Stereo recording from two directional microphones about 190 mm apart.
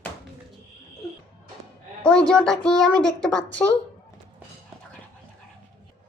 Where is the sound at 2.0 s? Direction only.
5° left (ahead or behind).